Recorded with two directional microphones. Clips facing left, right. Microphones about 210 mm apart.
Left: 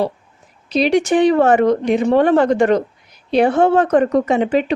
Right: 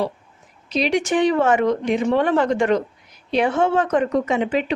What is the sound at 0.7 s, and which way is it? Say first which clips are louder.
Speech: left 5 dB; 35° left (ahead or behind).